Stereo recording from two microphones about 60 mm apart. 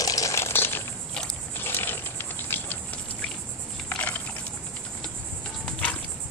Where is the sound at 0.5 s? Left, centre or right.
Left.